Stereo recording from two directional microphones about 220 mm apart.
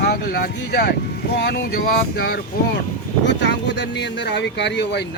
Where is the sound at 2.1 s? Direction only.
40° left (ahead or behind).